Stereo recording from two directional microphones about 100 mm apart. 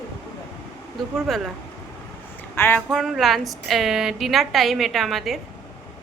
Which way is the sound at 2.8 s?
Centre (ahead or behind).